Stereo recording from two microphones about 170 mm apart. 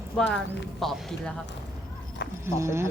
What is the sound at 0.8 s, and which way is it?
Speech, centre (ahead or behind).